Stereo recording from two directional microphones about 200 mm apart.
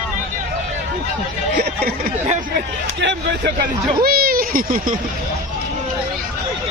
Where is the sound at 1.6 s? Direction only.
50° right (ahead or behind).